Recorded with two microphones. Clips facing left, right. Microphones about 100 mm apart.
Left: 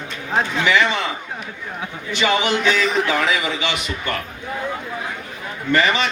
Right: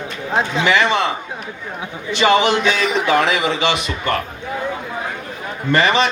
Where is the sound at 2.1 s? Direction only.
25° right (ahead or behind).